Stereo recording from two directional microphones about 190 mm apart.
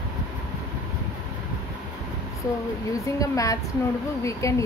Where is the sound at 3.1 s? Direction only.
15° left (ahead or behind).